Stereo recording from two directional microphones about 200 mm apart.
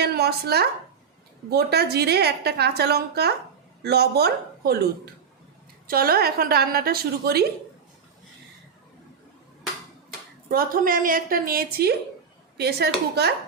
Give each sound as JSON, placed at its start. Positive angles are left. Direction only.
{"t": 0.0, "sound": "a woman's voice", "side_deg": -50}
{"t": 10.5, "sound": "a woman's voice", "side_deg": -45}